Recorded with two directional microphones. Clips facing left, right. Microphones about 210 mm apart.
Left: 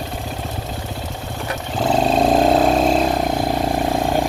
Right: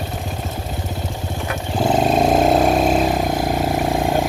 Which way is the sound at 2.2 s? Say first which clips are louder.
Left 1 dB; centre (ahead or behind).